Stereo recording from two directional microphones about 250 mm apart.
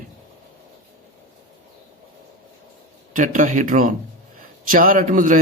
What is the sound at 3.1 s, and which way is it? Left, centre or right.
Speech, right.